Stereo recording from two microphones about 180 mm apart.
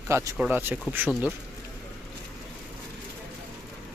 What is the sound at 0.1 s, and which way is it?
Speech, 15° right (ahead or behind).